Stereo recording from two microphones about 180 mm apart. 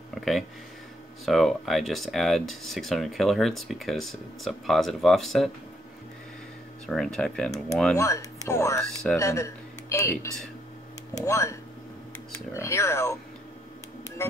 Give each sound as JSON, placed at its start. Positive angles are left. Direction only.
{"t": 0.1, "sound": "speech", "side_deg": 0}
{"t": 6.9, "sound": "speech", "side_deg": 0}
{"t": 7.9, "sound": "speech", "side_deg": 15}
{"t": 12.5, "sound": "speech", "side_deg": 15}